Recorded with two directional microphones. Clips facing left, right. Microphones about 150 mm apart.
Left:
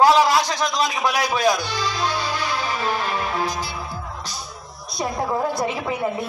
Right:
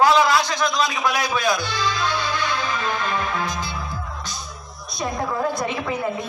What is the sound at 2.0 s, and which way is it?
Music, 35° left (ahead or behind).